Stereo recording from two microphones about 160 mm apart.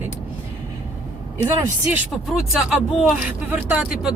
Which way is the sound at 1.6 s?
15° right (ahead or behind).